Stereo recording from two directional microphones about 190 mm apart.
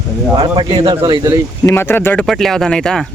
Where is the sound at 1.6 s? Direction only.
10° left (ahead or behind).